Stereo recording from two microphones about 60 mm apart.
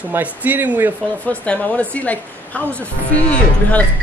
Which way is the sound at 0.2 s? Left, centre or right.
Right.